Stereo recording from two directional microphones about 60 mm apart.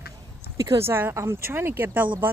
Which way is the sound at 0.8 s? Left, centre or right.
Right.